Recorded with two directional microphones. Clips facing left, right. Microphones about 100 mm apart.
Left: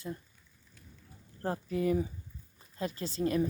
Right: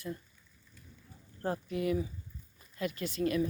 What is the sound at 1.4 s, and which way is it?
A woman's voice, 35° left (ahead or behind).